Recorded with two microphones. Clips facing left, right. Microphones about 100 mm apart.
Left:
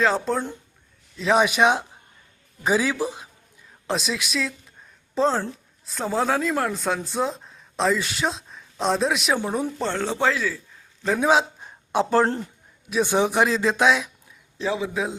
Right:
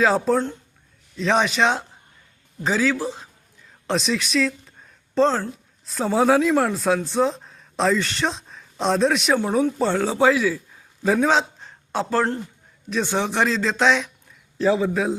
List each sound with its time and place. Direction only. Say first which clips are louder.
0.0 s a man's voice: right 3 dB; centre (ahead or behind); by 3.2 s 15° left (ahead or behind)
3.8 s speech: right 3 dB; centre (ahead or behind)
11.2 s a man's voice: even; 10° left (ahead or behind)